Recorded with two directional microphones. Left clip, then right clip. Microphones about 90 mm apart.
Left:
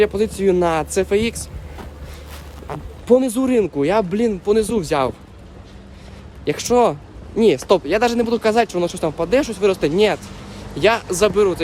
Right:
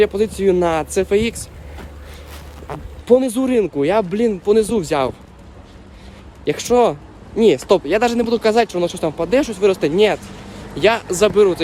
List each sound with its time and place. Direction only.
0.0 s speech: 35° left (ahead or behind)
2.7 s speech: centre (ahead or behind)
3.1 s speech: 40° left (ahead or behind)
4.4 s speech: 20° left (ahead or behind)
6.4 s speech: 30° left (ahead or behind); by 11.6 s 15° left (ahead or behind)